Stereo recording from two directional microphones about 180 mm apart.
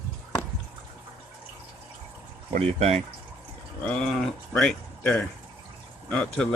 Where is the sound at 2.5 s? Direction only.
35° right (ahead or behind).